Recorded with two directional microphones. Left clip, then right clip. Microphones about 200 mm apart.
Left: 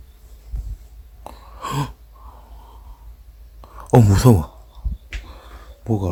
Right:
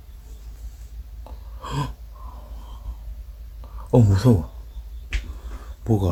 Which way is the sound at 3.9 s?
40° left (ahead or behind).